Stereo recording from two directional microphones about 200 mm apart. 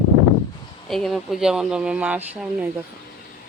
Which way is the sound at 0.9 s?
Centre (ahead or behind).